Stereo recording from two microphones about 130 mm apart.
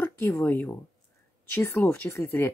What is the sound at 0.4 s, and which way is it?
Speech, 15° left (ahead or behind).